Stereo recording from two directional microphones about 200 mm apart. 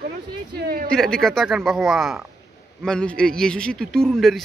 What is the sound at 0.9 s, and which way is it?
A man's voice, centre (ahead or behind).